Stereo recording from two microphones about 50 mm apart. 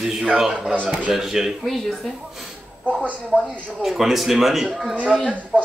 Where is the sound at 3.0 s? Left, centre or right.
Right.